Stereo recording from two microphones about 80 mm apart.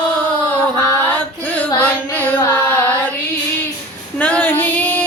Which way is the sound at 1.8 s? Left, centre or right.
Left.